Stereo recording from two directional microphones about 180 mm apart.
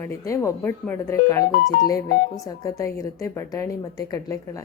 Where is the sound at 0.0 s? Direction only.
15° left (ahead or behind).